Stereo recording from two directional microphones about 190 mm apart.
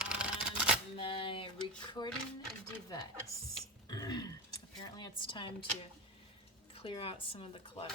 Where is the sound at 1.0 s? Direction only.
30° left (ahead or behind).